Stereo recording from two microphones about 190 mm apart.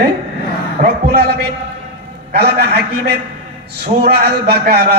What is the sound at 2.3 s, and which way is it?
A man's voice, 60° right (ahead or behind).